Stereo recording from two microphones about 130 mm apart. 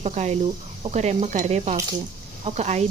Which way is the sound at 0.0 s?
60° right (ahead or behind).